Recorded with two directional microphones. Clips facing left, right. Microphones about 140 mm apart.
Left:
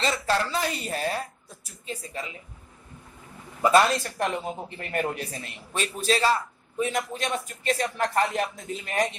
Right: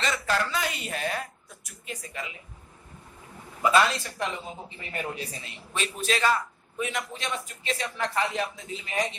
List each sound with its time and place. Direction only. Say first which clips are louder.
0.0 s a sound: left 2 dB; 30° left (ahead or behind)
3.6 s a man's voice: left 3 dB; 40° left (ahead or behind)
4.6 s a man's voice: left 5 dB; 55° left (ahead or behind)